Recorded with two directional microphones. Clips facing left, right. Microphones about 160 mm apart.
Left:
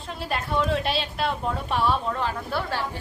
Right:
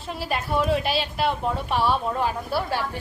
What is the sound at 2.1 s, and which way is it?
Speech, 10° right (ahead or behind).